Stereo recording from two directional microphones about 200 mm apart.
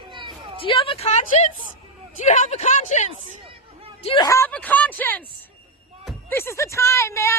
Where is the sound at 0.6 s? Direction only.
25° left (ahead or behind).